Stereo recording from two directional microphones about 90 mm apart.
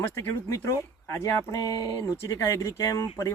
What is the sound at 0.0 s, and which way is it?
Speech, 25° left (ahead or behind).